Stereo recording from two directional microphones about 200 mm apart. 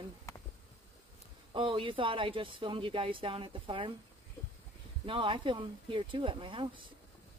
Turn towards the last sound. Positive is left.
turn(degrees=-25)  # may be behind; listen again after turning